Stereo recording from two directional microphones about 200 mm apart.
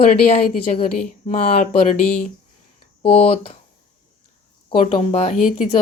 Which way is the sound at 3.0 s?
30° left (ahead or behind).